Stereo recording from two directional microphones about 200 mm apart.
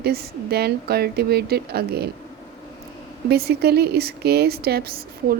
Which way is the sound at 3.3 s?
55° right (ahead or behind).